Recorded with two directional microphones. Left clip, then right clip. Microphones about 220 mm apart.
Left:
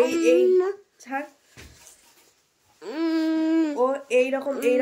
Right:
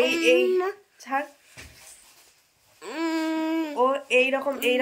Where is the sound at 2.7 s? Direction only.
15° left (ahead or behind).